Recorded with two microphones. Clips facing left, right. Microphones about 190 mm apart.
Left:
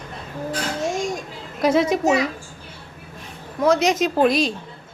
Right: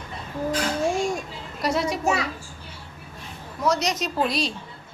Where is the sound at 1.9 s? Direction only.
20° left (ahead or behind).